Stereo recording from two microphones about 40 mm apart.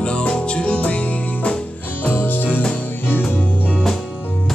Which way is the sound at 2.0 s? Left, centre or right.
Left.